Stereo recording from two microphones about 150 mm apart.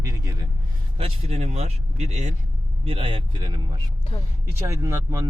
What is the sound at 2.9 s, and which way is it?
Speech, 40° right (ahead or behind).